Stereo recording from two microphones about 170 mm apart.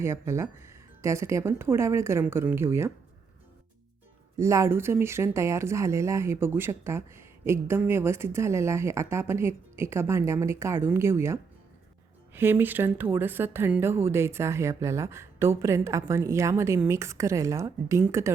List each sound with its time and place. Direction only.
0.0 s speech: 15° right (ahead or behind)
4.4 s speech: 15° right (ahead or behind)